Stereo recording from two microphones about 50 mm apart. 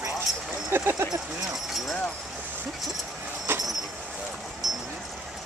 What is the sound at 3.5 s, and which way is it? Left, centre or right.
Vehicle, right.